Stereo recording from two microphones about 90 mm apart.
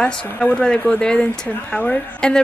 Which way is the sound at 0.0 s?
10° left (ahead or behind).